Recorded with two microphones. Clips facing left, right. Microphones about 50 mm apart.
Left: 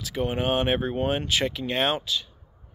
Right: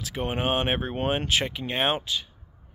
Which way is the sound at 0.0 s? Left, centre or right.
Right.